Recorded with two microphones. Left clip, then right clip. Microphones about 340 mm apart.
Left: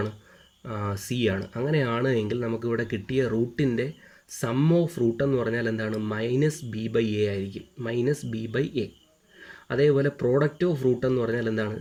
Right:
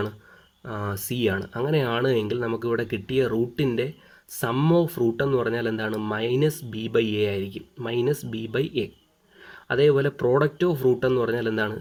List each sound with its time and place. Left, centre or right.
0.7 s speech: right